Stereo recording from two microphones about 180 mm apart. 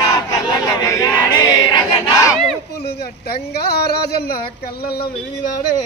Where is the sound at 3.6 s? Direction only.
60° left (ahead or behind).